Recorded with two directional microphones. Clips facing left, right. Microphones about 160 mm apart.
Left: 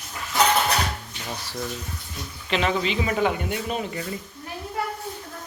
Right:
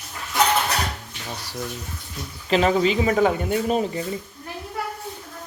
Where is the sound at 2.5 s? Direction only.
40° right (ahead or behind).